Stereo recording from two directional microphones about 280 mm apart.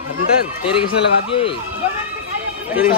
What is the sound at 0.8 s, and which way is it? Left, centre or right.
Speech, centre.